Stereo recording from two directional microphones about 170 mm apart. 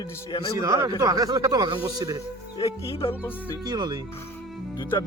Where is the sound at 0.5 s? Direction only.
20° right (ahead or behind).